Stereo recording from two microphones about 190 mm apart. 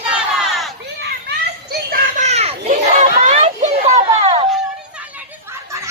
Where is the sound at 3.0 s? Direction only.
35° right (ahead or behind).